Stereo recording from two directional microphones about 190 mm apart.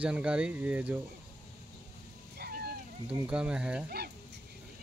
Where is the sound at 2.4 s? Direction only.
55° right (ahead or behind).